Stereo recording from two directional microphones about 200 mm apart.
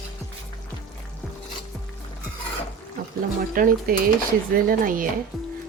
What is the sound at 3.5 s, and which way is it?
Speech, 45° right (ahead or behind).